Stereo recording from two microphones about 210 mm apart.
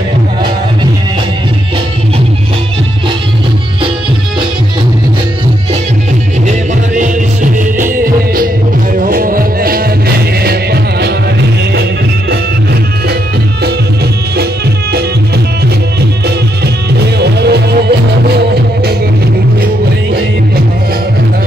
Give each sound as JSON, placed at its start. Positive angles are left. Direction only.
{"t": 7.8, "sound": "music", "side_deg": -40}
{"t": 14.3, "sound": "music", "side_deg": -50}
{"t": 17.2, "sound": "music", "side_deg": -50}